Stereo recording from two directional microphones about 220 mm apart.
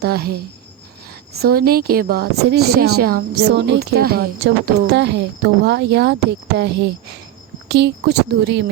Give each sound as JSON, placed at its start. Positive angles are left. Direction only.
{"t": 0.0, "sound": "speech", "side_deg": -45}
{"t": 1.4, "sound": "speech", "side_deg": -45}